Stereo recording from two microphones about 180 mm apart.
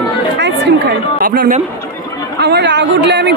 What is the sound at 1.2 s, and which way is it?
Speech, 50° right (ahead or behind).